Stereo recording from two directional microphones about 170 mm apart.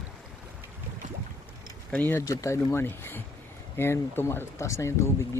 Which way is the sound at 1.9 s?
10° left (ahead or behind).